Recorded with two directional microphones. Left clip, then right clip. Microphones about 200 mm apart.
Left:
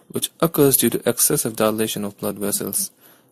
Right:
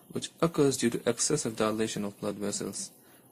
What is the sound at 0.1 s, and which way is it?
Speech, 35° left (ahead or behind).